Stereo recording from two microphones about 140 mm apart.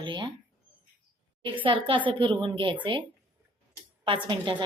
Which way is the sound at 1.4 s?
35° right (ahead or behind).